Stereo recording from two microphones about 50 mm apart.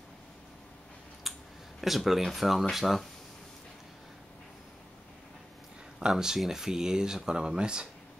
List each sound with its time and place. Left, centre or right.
1.3 s a sound: centre
1.8 s speech: centre
5.9 s speech: centre